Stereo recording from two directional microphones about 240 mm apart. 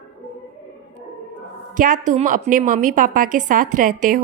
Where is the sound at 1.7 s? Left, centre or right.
Right.